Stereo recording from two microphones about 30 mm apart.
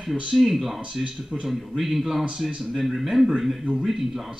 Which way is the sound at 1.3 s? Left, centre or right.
Left.